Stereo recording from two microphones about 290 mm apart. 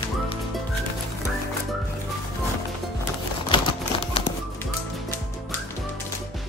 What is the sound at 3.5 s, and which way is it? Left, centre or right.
Typewriter, centre.